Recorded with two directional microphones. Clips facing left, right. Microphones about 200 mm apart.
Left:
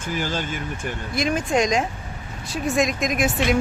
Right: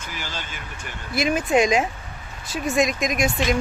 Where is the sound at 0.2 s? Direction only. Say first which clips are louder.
Left 8 dB; 50° left (ahead or behind).